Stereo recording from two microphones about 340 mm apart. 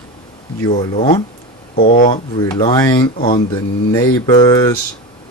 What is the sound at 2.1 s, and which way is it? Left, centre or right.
Speech, centre.